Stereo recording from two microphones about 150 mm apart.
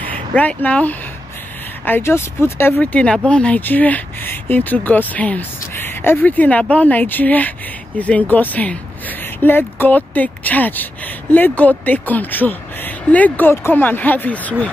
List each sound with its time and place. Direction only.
0.0 s speech: 10° left (ahead or behind)